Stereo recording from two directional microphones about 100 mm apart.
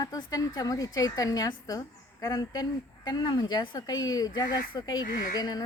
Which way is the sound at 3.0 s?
45° left (ahead or behind).